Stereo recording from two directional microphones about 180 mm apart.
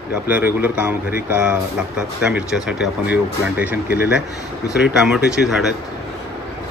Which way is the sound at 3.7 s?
60° left (ahead or behind).